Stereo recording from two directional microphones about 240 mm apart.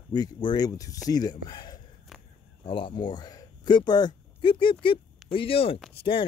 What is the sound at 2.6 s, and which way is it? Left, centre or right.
Speech, left.